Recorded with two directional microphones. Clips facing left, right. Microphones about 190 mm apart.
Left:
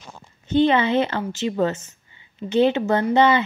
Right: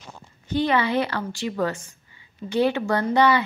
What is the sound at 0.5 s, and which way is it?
A woman's voice, 25° left (ahead or behind).